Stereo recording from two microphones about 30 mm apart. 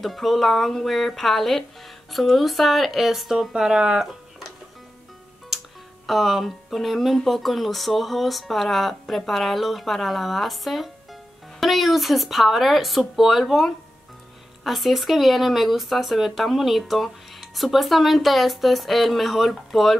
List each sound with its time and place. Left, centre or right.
0.0 s speech: centre
3.3 s speech: right
6.0 s speech: centre
14.6 s speech: centre